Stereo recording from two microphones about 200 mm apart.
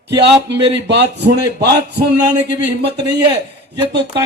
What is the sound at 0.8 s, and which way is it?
Speech, 60° right (ahead or behind).